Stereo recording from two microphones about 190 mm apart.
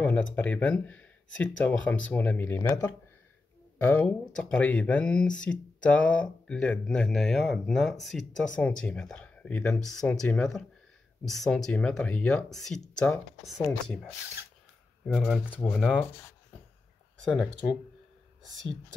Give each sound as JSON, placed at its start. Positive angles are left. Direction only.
{"t": 0.0, "sound": "speech", "side_deg": 5}